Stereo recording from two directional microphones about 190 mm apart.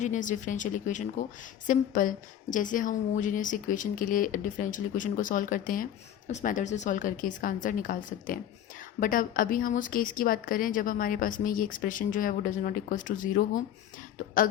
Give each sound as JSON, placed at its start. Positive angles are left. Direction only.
{"t": 0.0, "sound": "a woman's voice", "side_deg": 40}